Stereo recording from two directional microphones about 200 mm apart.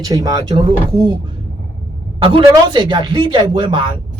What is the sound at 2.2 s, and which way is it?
Speech, 25° right (ahead or behind).